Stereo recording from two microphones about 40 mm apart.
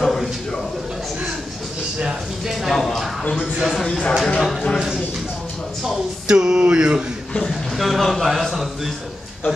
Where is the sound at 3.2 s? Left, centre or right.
Left.